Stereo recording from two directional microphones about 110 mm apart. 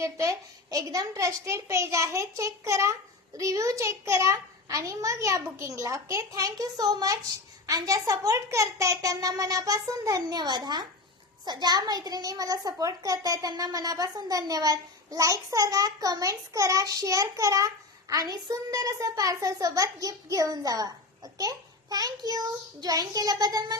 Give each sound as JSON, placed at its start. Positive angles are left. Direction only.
{"t": 0.0, "sound": "a child's voice", "side_deg": -30}